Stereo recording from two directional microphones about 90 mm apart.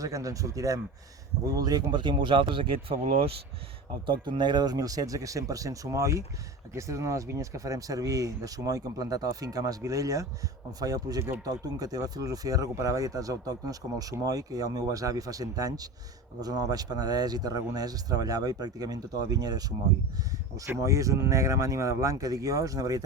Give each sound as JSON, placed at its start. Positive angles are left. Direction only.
{"t": 0.0, "sound": "speech", "side_deg": -40}
{"t": 4.0, "sound": "speech", "side_deg": -60}